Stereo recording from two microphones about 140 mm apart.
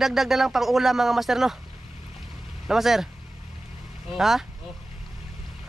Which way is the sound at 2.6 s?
Centre (ahead or behind).